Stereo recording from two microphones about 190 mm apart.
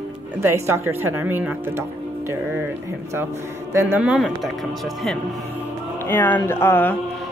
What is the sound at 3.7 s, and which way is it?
Speech, 10° right (ahead or behind).